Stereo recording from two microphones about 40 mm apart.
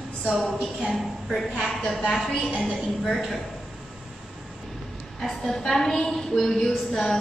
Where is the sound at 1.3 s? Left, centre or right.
Centre.